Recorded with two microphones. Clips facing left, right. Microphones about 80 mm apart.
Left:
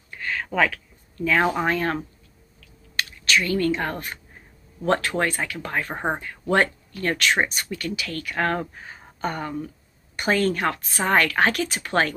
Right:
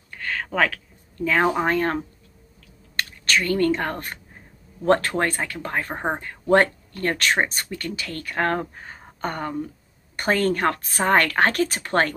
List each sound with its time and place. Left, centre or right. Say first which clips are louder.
0.5 s speech: even; right
1.7 s speech: right 2 dB; right
3.0 s speech: even; right
5.9 s speech: even; centre
6.5 s speech: right 3 dB; right